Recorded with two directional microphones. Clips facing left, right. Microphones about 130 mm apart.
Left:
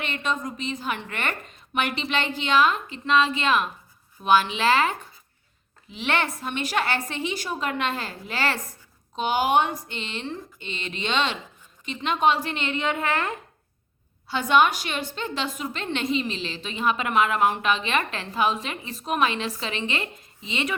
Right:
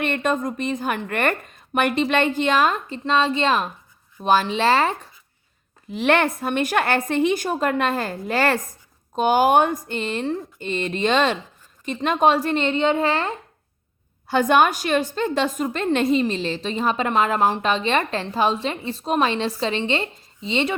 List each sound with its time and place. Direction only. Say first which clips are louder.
0.0 s a woman's voice: right 6 dB; 50° right (ahead or behind); by 4.9 s 35° right (ahead or behind)
5.9 s a woman's voice: right 7 dB; 50° right (ahead or behind); by 13.3 s 30° right (ahead or behind)
14.3 s a woman's voice: right 3 dB; 50° right (ahead or behind); by 20.7 s 30° right (ahead or behind)